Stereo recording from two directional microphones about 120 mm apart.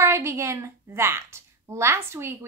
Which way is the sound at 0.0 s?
20° right (ahead or behind).